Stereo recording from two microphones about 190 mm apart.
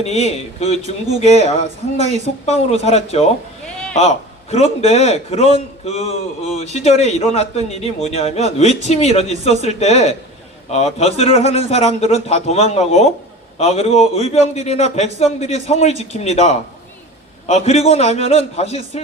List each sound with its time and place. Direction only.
0.0 s a man's voice: 35° left (ahead or behind)
1.6 s speech: 35° right (ahead or behind)
2.5 s a man's voice: 35° left (ahead or behind)
4.5 s a man's voice: 35° left (ahead or behind)
17.7 s a man's voice: 35° left (ahead or behind)